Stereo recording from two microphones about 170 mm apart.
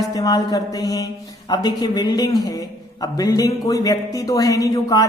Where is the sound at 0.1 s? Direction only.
20° left (ahead or behind).